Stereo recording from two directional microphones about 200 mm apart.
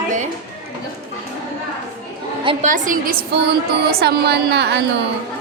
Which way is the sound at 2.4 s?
25° right (ahead or behind).